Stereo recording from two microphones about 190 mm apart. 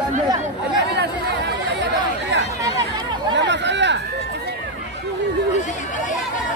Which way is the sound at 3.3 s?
65° right (ahead or behind).